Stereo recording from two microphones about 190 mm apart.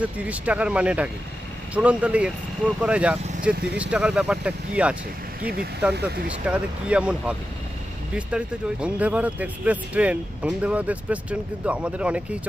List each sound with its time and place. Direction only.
0.0 s speech: 5° right (ahead or behind)
5.4 s speech: 55° right (ahead or behind)
6.2 s speech: 5° right (ahead or behind)